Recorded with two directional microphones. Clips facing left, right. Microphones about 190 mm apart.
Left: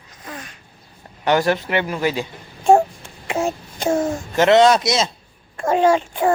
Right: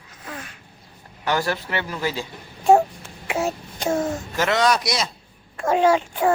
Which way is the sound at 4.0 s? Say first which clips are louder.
Left 5 dB; 25° left (ahead or behind).